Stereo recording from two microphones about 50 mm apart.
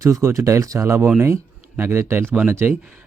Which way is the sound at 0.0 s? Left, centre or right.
Right.